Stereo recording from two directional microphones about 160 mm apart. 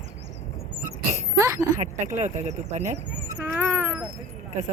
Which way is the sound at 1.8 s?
50° right (ahead or behind).